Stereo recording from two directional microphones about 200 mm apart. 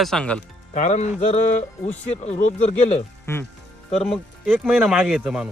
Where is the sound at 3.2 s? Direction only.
10° left (ahead or behind).